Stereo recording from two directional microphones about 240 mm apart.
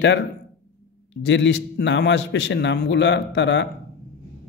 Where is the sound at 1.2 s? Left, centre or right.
Left.